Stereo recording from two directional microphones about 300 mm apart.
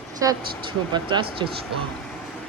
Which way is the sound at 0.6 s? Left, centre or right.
Centre.